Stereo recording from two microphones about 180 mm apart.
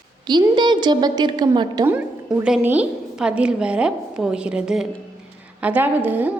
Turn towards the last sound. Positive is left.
turn(degrees=-10)  # may be behind; listen again after turning